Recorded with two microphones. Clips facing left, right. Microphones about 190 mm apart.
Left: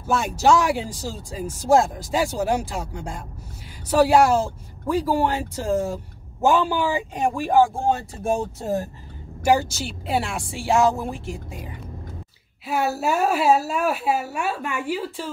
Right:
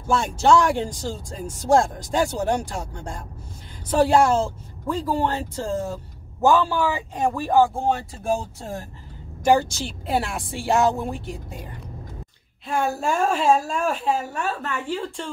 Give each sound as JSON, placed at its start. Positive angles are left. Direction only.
{"t": 0.0, "sound": "speech", "side_deg": 5}
{"t": 9.4, "sound": "speech", "side_deg": 5}